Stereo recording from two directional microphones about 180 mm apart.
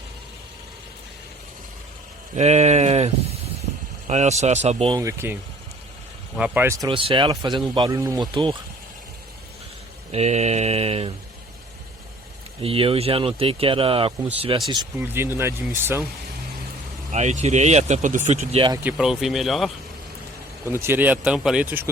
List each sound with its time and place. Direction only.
2.3 s speech: 40° right (ahead or behind)
4.9 s speech: 15° right (ahead or behind)
10.1 s speech: 35° right (ahead or behind)
12.6 s speech: 30° right (ahead or behind)
15.0 s speech: 15° right (ahead or behind)
17.1 s speech: 40° right (ahead or behind)
18.8 s speech: 5° right (ahead or behind)
20.7 s speech: 15° right (ahead or behind)